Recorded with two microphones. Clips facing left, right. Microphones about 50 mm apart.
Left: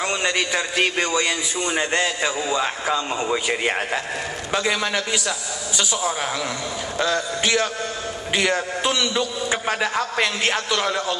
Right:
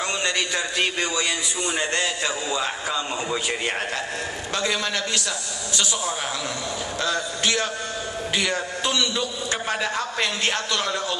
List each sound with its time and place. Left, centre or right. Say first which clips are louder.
0.0 s a man's voice: left 3 dB; centre
7.4 s a man's voice: left 2 dB; centre